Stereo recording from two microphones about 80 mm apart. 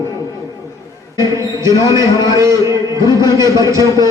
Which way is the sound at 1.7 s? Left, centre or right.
Left.